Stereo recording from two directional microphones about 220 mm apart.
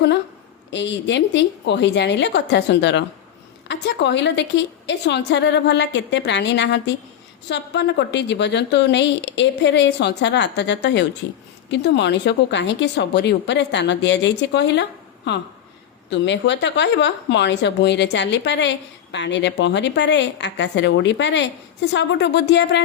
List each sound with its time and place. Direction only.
0.7 s speech: 55° left (ahead or behind)